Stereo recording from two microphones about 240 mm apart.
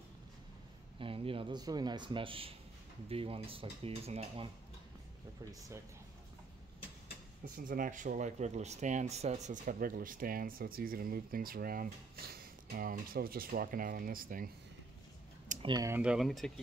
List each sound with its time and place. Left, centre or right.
0.9 s speech: right
7.5 s speech: right
15.4 s a sound: right
15.7 s speech: centre